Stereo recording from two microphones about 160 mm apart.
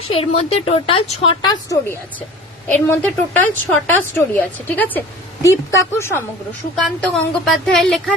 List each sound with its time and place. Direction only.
0.1 s a woman's voice: 35° left (ahead or behind)
1.5 s a woman's voice: 20° left (ahead or behind)
7.0 s a woman's voice: centre (ahead or behind)